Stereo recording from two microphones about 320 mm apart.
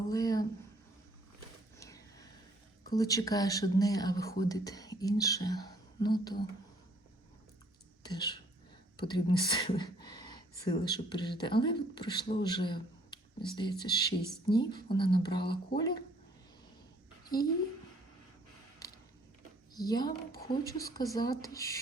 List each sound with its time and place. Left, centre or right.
0.1 s a sound: centre
1.8 s vehicle: centre
2.9 s a woman's voice: centre
8.0 s a woman's voice: centre
17.3 s a woman's voice: left
19.7 s a woman's voice: centre